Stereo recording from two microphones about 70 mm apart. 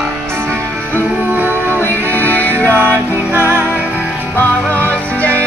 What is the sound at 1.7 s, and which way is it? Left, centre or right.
Music, left.